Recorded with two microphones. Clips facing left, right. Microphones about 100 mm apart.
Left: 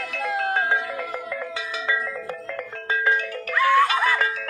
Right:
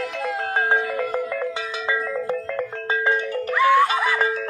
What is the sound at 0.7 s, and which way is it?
Music, 25° right (ahead or behind).